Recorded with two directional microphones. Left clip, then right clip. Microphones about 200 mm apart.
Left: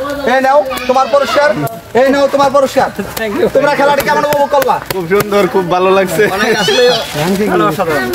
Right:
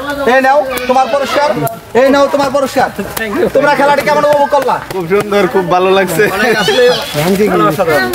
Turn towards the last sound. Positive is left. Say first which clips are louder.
# right 2 dB
turn(degrees=0)  # may be behind; listen again after turning